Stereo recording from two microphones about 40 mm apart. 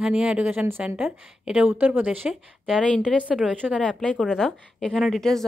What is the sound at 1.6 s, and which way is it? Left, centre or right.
Speech, right.